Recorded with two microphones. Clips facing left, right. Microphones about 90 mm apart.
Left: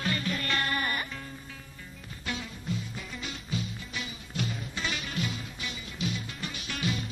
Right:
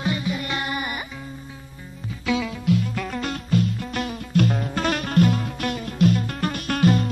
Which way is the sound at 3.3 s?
55° right (ahead or behind).